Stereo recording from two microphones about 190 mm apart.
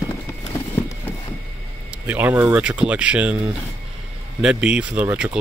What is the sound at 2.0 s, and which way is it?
Speech, 10° right (ahead or behind).